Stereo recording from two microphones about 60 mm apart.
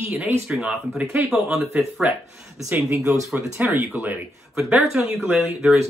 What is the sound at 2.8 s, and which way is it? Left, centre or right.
Speech, right.